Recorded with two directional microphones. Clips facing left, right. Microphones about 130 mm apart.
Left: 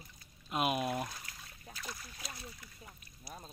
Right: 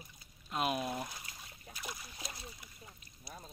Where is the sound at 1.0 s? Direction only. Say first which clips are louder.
Left 2 dB; 15° right (ahead or behind).